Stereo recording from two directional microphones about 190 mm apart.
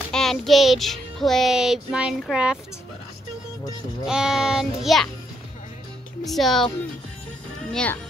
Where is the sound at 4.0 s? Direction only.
5° right (ahead or behind).